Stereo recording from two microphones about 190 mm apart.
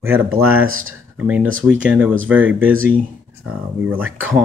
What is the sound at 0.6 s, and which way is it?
Speech, 90° right.